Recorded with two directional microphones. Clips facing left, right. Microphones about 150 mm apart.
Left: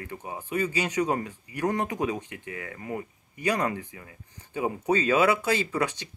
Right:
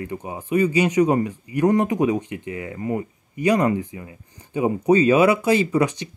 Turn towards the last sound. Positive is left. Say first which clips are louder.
# right 8 dB
turn(degrees=-15)  # may be behind; listen again after turning